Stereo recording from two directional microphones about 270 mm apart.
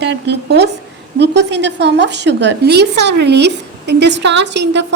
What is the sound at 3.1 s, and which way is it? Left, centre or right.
Speech, right.